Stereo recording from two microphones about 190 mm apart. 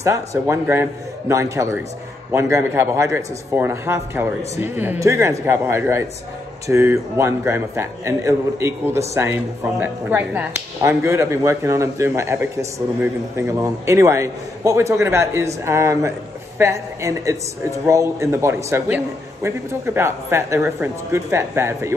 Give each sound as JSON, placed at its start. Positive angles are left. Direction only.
{"t": 0.0, "sound": "a man's voice", "side_deg": -15}